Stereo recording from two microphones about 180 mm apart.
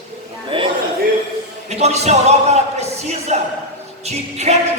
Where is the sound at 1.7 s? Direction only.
35° right (ahead or behind).